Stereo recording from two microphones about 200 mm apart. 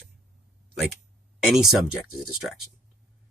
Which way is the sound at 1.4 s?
Centre (ahead or behind).